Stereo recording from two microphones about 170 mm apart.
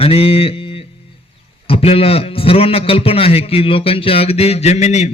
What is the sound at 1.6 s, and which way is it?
A man's voice, 35° left (ahead or behind).